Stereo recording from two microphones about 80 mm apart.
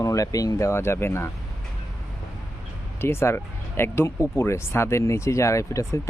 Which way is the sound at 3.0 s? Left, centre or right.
Left.